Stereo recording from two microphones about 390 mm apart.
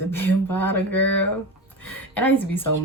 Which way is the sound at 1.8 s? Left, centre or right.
Centre.